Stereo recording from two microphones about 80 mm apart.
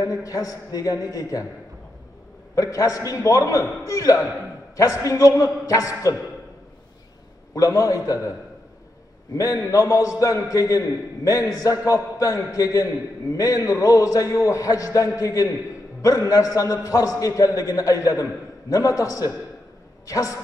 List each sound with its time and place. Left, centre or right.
0.0 s a man's voice: left
2.5 s a man's voice: left
7.5 s a man's voice: left
9.4 s a man's voice: left